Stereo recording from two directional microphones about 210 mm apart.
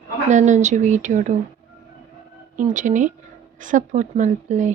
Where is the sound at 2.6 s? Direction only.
35° right (ahead or behind).